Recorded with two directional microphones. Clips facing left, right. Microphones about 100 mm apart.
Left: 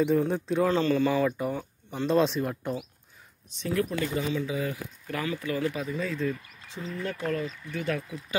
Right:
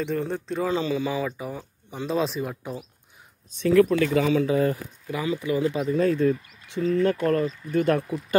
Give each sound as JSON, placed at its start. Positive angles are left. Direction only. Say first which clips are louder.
{"t": 0.0, "sound": "speech", "louder": "left 3 dB", "side_deg": 5}
{"t": 3.6, "sound": "speech", "louder": "right 10 dB", "side_deg": -90}
{"t": 4.5, "sound": "speech", "louder": "right 9 dB", "side_deg": -50}
{"t": 5.0, "sound": "speech", "louder": "right 4 dB", "side_deg": -15}
{"t": 5.9, "sound": "speech", "louder": "right 9 dB", "side_deg": -55}